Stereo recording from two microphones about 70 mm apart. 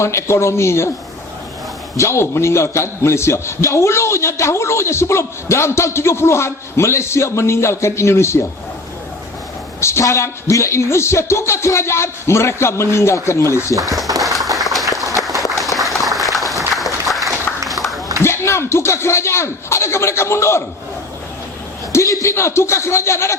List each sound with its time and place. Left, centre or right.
0.0 s a man's voice: left
2.0 s a man's voice: left
9.8 s a man's voice: left
14.2 s applause: centre
17.7 s a sound: centre
18.2 s speech: left
21.9 s a man's voice: left